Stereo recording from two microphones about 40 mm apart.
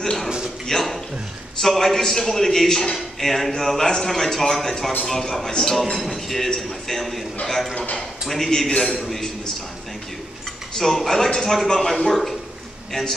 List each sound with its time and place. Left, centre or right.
0.0 s speech: centre
0.7 s a sound: centre
1.6 s a man's voice: centre
8.3 s a man's voice: centre
8.8 s a man's voice: centre
10.8 s a man's voice: centre